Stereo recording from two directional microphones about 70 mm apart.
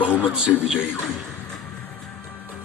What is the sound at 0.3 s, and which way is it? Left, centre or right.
Speech, centre.